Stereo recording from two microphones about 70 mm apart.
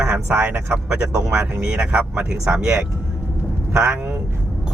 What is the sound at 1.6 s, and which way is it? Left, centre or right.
Speech, centre.